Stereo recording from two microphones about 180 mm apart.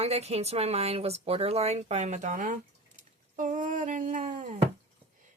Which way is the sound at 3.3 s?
45° right (ahead or behind).